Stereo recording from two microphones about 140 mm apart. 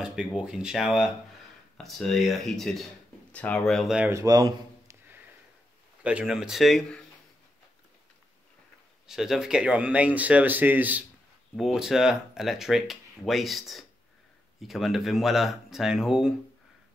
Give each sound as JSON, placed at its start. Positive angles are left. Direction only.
{"t": 0.0, "sound": "speech", "side_deg": -5}
{"t": 4.1, "sound": "a man's voice", "side_deg": -25}
{"t": 6.0, "sound": "speech", "side_deg": -5}
{"t": 9.0, "sound": "speech", "side_deg": -5}